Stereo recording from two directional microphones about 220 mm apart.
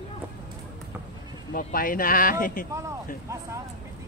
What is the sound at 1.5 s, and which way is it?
Speech, 40° left (ahead or behind).